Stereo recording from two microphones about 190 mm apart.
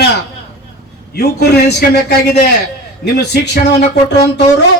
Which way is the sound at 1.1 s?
60° left (ahead or behind).